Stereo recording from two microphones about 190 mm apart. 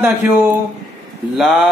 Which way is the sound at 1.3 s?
Centre (ahead or behind).